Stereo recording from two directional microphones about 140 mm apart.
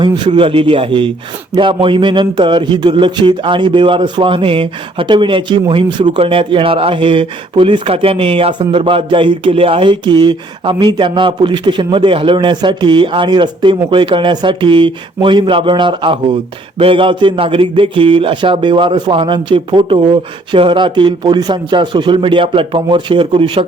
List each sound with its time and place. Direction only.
0.3 s a man's voice: 40° right (ahead or behind)